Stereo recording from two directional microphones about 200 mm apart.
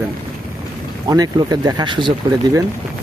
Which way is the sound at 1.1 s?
20° right (ahead or behind).